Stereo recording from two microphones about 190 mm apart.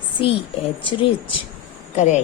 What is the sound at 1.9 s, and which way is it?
Speech, 40° left (ahead or behind).